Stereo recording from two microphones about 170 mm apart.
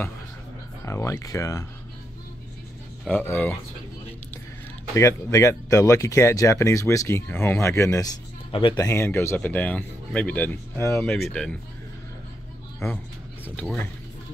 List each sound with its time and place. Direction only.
0.8 s speech: 15° left (ahead or behind)
3.1 s speech: 10° left (ahead or behind)
4.9 s speech: 20° left (ahead or behind)
8.8 s speech: 15° left (ahead or behind)
11.1 s speech: 5° left (ahead or behind)
12.8 s speech: 15° left (ahead or behind)